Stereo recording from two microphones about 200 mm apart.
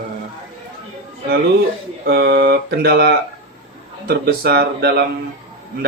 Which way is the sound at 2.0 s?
50° right (ahead or behind).